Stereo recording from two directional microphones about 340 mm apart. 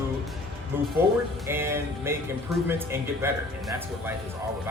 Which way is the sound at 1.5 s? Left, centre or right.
Centre.